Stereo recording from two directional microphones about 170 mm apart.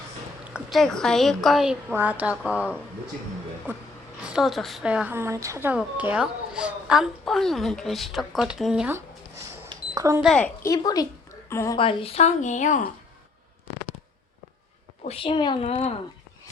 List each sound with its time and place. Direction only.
0.4 s a woman's voice: 5° right (ahead or behind)
9.5 s beep: 20° right (ahead or behind)
10.2 s a woman's voice: centre (ahead or behind)
10.6 s a woman's voice: 20° left (ahead or behind)
11.8 s a woman's voice: 30° left (ahead or behind); by 12.9 s 50° left (ahead or behind)
15.0 s a woman's voice: 35° left (ahead or behind)